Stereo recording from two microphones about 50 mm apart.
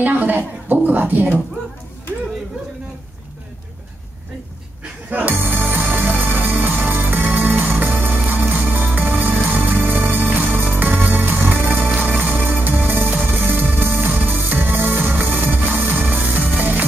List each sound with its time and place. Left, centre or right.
0.0 s a woman's voice: right
5.1 s music: right
11.9 s music: right